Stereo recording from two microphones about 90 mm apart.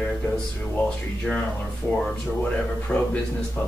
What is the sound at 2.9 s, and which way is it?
Speech, 5° left (ahead or behind).